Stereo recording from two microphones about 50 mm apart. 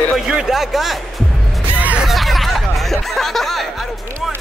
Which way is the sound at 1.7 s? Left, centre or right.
Right.